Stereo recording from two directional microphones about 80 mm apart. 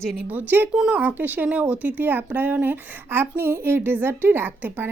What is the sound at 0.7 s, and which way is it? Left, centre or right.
Speech, centre.